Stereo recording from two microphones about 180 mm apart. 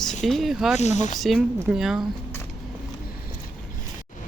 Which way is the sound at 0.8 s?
40° left (ahead or behind).